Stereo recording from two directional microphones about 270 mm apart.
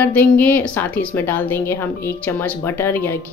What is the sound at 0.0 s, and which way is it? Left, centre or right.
Speech, centre.